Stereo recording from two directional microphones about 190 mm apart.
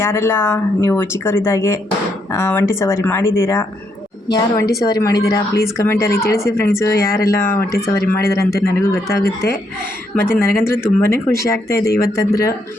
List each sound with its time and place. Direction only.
0.0 s a woman's voice: 15° left (ahead or behind)